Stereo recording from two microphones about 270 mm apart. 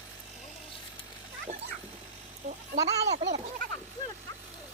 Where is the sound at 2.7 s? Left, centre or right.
Right.